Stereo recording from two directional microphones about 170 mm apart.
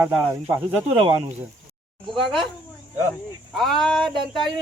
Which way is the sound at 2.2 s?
Centre (ahead or behind).